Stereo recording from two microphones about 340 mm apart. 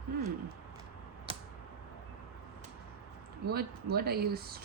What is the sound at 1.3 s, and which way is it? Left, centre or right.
Tick-tock, centre.